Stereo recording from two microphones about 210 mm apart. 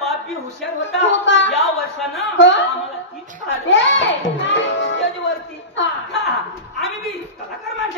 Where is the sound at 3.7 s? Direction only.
60° left (ahead or behind).